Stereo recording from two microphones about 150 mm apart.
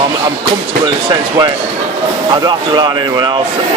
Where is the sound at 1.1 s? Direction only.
25° right (ahead or behind).